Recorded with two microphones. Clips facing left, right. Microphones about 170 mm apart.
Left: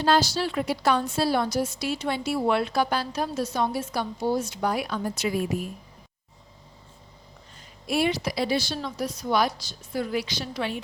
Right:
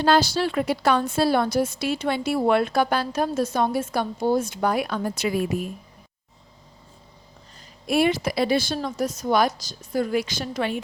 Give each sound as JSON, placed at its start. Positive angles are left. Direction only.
{"t": 0.0, "sound": "a woman's voice", "side_deg": -60}
{"t": 7.9, "sound": "a woman's voice", "side_deg": -55}